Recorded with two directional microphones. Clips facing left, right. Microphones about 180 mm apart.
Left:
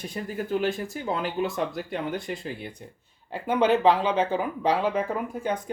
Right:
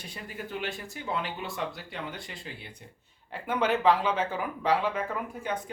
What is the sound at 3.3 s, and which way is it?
Speech, 30° left (ahead or behind).